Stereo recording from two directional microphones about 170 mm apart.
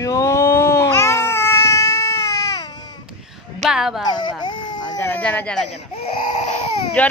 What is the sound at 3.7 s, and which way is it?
Speech, centre (ahead or behind).